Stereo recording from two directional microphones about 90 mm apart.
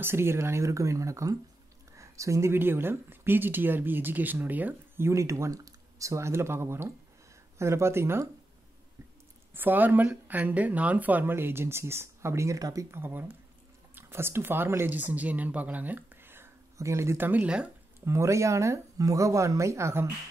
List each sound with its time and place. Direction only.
0.0 s speech: 25° right (ahead or behind)
9.6 s speech: 20° right (ahead or behind); by 12.8 s 40° right (ahead or behind)
12.9 s speech: 25° right (ahead or behind)
17.3 s speech: 15° right (ahead or behind)
18.0 s speech: 35° right (ahead or behind)